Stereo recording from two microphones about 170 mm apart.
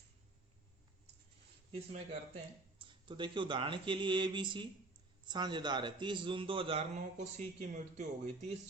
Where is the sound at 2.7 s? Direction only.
30° right (ahead or behind).